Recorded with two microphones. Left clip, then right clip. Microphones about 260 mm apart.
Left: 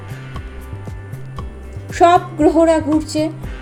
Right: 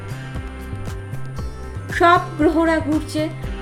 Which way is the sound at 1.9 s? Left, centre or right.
Centre.